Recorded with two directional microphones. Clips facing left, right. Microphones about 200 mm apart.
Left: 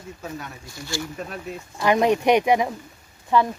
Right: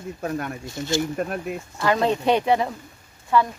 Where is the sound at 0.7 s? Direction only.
20° right (ahead or behind).